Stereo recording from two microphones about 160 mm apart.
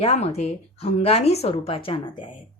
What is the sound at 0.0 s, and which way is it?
A woman's voice, 40° left (ahead or behind).